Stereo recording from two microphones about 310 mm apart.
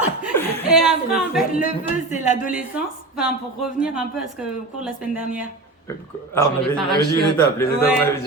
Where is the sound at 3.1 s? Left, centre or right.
Centre.